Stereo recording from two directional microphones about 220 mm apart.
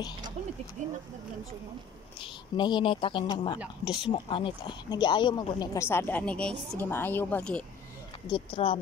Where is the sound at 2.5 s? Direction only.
20° left (ahead or behind).